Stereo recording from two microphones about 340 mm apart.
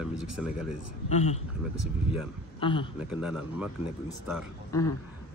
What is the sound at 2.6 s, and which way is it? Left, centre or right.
Speech, centre.